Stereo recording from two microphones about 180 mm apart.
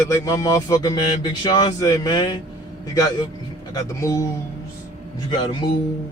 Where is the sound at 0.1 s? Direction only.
20° left (ahead or behind).